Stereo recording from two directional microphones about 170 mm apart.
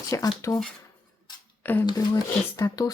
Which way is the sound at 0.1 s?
20° left (ahead or behind).